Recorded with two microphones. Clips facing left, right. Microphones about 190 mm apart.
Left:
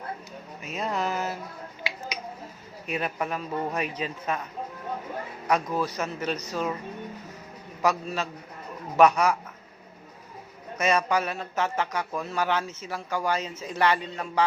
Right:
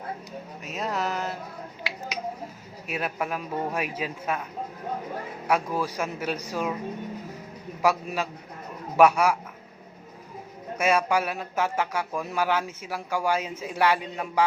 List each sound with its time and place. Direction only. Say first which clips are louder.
0.6 s a sound: even; centre (ahead or behind)
1.8 s finger snapping: left 1 dB; centre (ahead or behind)
2.8 s speech: even; 5° right (ahead or behind)
5.5 s speech: even; 10° right (ahead or behind)
7.8 s speech: right 1 dB; 10° right (ahead or behind)
10.8 s speech: right 1 dB; 10° right (ahead or behind)